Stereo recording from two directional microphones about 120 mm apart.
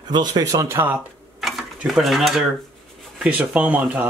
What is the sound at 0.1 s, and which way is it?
Speech, 35° right (ahead or behind).